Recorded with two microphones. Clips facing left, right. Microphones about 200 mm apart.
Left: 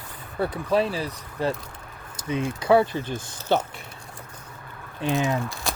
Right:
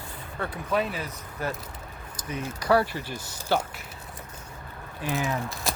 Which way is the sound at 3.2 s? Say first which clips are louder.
Left 2 dB; 10° right (ahead or behind).